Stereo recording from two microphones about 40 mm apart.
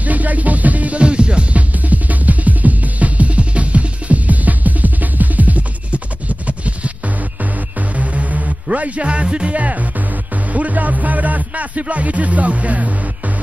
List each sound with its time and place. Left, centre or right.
0.0 s music: right
1.0 s music: right
1.7 s music: right
9.6 s music: right